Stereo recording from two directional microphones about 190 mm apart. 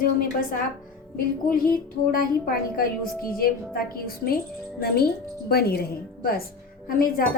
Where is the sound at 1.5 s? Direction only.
50° left (ahead or behind).